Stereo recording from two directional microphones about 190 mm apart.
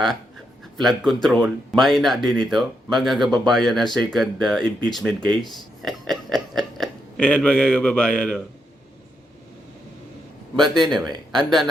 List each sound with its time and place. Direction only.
0.8 s speech: centre (ahead or behind)
10.6 s speech: centre (ahead or behind)
11.0 s speech: 20° right (ahead or behind)
11.3 s speech: centre (ahead or behind)